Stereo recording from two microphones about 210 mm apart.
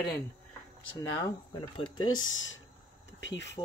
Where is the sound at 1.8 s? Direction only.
80° left; by 2.6 s 65° left (ahead or behind).